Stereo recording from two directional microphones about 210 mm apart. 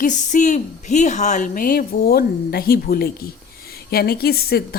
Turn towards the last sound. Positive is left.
turn(degrees=45)  # may be behind; listen again after turning